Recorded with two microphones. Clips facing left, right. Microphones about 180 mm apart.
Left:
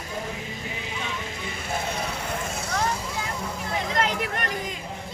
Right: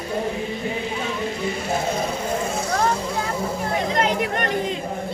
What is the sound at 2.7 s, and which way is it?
Vehicle, 50° right (ahead or behind).